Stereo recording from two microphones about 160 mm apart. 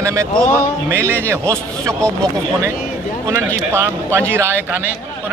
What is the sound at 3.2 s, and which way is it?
A man's voice, 20° right (ahead or behind).